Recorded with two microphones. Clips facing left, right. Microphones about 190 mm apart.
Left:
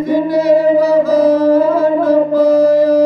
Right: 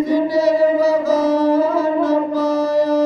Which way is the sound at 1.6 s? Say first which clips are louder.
Left 4 dB; 55° left (ahead or behind).